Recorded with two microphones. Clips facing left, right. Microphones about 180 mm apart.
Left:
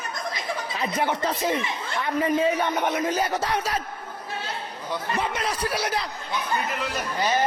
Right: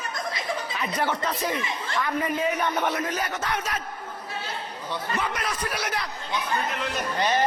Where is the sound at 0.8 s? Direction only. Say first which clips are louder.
Left 3 dB; 25° left (ahead or behind).